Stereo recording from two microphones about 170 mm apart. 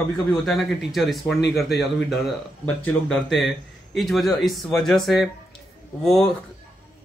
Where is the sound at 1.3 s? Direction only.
80° left.